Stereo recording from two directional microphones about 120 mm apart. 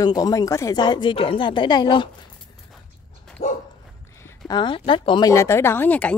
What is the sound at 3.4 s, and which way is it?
Dog, 65° left (ahead or behind).